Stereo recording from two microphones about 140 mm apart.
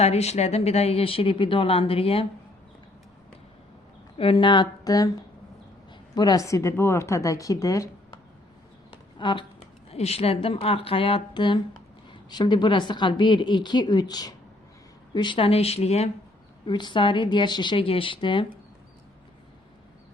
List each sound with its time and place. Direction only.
0.0 s speech: 50° left (ahead or behind)
4.2 s a woman's voice: 35° left (ahead or behind)
6.1 s speech: 25° left (ahead or behind)
9.1 s a woman's voice: 35° left (ahead or behind)
16.6 s a woman's voice: 35° left (ahead or behind)